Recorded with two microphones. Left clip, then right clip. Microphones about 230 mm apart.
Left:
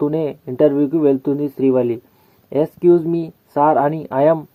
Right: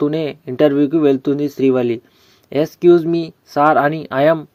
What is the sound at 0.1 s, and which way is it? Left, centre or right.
Speech, centre.